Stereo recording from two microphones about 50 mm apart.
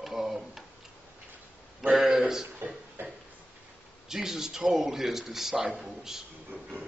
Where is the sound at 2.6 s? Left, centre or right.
Right.